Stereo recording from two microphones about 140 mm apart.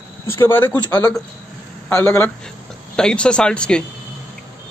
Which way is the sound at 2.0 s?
15° left (ahead or behind).